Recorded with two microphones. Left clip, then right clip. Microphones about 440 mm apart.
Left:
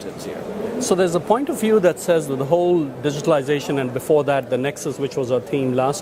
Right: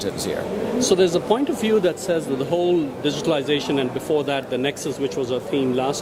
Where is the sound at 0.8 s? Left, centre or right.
Left.